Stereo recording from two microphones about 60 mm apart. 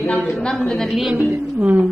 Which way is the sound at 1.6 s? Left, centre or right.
Right.